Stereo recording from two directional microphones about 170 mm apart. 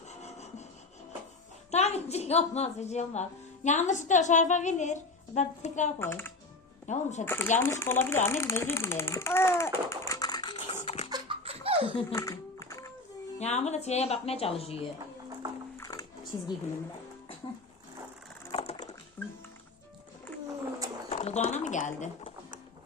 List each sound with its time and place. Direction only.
0.1 s rub: 40° left (ahead or behind)
1.7 s a woman's voice: 40° left (ahead or behind)
6.0 s speech: 15° left (ahead or behind)
6.8 s a woman's voice: 45° left (ahead or behind)
7.3 s a child's voice: 15° left (ahead or behind); by 11.1 s 35° left (ahead or behind)
11.1 s laughter: 30° right (ahead or behind)
12.1 s music: 20° left (ahead or behind)
13.4 s speech: 40° left (ahead or behind)
15.8 s music: 20° left (ahead or behind)
18.5 s a sound: 40° left (ahead or behind)
19.2 s speech: 10° left (ahead or behind)
21.1 s speech: 40° left (ahead or behind)